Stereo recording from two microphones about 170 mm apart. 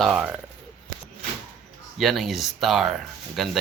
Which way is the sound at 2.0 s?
Centre (ahead or behind).